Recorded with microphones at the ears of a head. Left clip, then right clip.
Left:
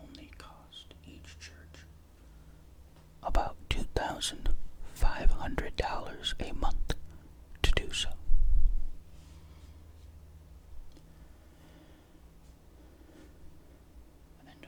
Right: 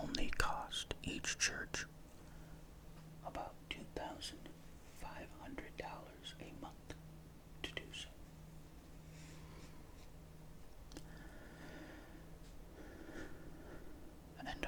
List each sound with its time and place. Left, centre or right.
0.0 s whispering: right
3.2 s whispering: left